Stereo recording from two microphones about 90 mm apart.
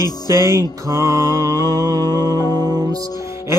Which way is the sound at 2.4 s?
45° right (ahead or behind).